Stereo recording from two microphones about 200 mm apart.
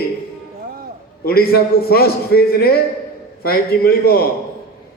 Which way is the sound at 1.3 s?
50° left (ahead or behind).